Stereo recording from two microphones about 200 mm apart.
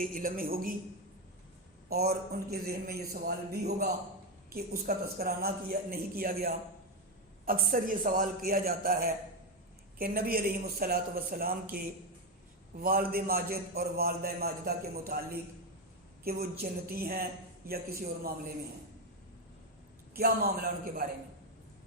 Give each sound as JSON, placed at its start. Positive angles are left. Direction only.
{"t": 0.0, "sound": "a man's voice", "side_deg": -45}
{"t": 1.9, "sound": "a man's voice", "side_deg": -50}
{"t": 20.1, "sound": "a man's voice", "side_deg": -50}